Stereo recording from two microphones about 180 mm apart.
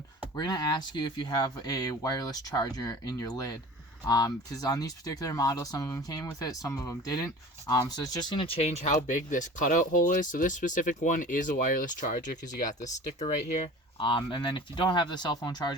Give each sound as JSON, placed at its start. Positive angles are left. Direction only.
{"t": 0.3, "sound": "speech", "side_deg": 20}